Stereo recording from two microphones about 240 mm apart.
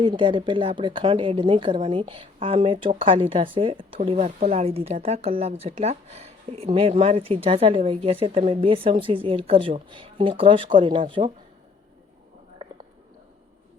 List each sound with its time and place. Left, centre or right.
0.0 s a woman's voice: right